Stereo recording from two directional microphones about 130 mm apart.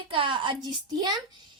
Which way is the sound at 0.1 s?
40° right (ahead or behind).